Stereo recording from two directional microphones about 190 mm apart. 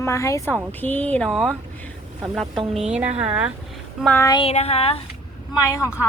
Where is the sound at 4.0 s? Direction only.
5° left (ahead or behind).